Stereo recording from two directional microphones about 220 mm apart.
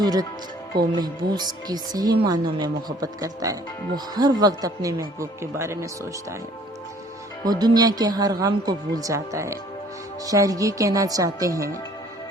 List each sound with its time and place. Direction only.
0.0 s speech: 15° right (ahead or behind)
7.4 s speech: 20° right (ahead or behind)